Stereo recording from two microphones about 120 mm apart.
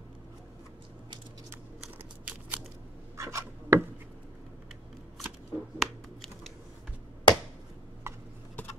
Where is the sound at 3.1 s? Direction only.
25° right (ahead or behind).